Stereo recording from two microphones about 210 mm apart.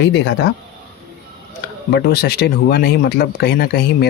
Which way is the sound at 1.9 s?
50° left (ahead or behind).